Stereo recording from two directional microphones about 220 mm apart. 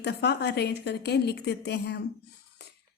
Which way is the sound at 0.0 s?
50° left (ahead or behind).